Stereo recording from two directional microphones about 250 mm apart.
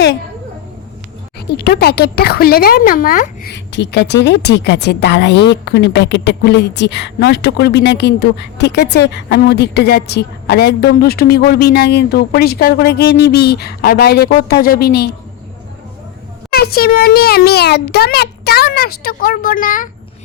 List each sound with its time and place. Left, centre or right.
1.5 s speech: left
16.5 s speech: left